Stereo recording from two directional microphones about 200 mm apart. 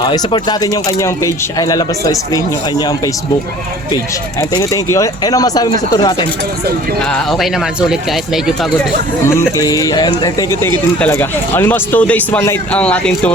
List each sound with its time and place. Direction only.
0.0 s speech: 25° left (ahead or behind)
4.4 s speech: 20° left (ahead or behind)
7.1 s speech: centre (ahead or behind)
9.2 s speech: 15° left (ahead or behind)